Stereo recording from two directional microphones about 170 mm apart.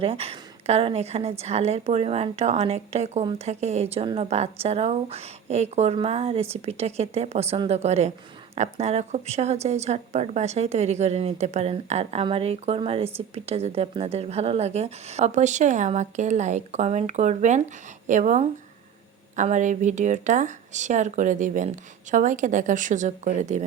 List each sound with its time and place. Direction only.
0.0 s a woman's voice: 35° right (ahead or behind)